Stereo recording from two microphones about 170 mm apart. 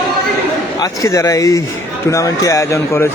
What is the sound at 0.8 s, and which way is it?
A man's voice, 20° left (ahead or behind).